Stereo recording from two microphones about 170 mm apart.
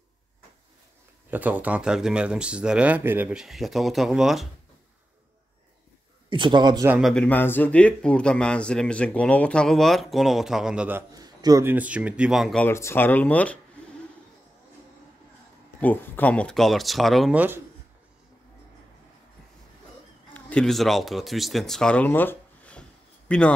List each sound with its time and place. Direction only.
1.3 s a man's voice: 10° right (ahead or behind)
6.3 s speech: 25° right (ahead or behind)
7.0 s a man's voice: 5° left (ahead or behind)
11.1 s speech: 20° right (ahead or behind); by 12.6 s centre (ahead or behind)
12.6 s speech: 15° left (ahead or behind)
15.8 s a man's voice: 10° left (ahead or behind); by 17.6 s 10° right (ahead or behind)
20.3 s speech: 5° left (ahead or behind)